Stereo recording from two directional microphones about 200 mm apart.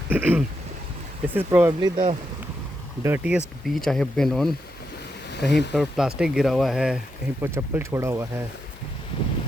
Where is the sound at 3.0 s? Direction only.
10° right (ahead or behind).